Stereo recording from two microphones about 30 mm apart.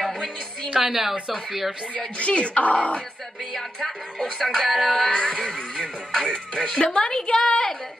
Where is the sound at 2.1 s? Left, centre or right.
Left.